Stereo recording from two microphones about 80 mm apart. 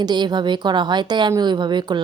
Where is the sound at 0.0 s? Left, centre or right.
Right.